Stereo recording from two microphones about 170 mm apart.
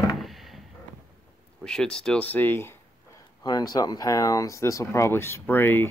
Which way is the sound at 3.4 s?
25° left (ahead or behind).